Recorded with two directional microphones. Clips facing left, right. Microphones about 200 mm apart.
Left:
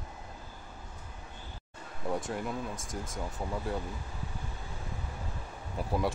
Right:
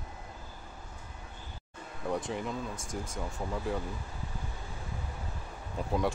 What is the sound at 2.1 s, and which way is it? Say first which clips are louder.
Speech: even; centre (ahead or behind).